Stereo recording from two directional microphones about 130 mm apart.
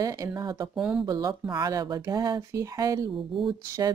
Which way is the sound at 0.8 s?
5° right (ahead or behind).